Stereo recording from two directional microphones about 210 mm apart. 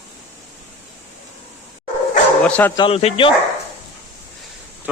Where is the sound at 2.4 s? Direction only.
5° left (ahead or behind).